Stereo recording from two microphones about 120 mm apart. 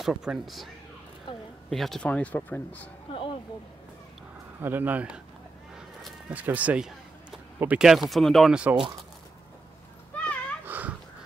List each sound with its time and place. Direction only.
0.0 s speech: 5° right (ahead or behind)
1.7 s speech: 5° left (ahead or behind)
3.1 s a sound: 45° left (ahead or behind)
4.6 s speech: 15° right (ahead or behind)
5.8 s a sound: 5° right (ahead or behind)
6.4 s speech: 15° right (ahead or behind)
10.1 s dog: 10° left (ahead or behind)
10.6 s dog: 15° right (ahead or behind)